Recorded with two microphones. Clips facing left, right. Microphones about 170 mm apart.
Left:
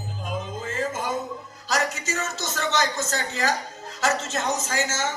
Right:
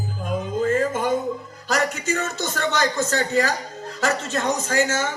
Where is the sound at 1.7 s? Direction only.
55° right (ahead or behind).